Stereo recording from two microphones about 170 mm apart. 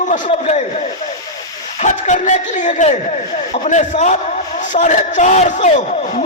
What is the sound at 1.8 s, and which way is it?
Speech, 45° left (ahead or behind).